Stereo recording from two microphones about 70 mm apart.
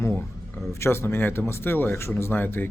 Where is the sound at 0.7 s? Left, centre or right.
Left.